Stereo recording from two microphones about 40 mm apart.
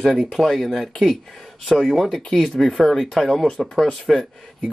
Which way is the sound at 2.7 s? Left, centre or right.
Centre.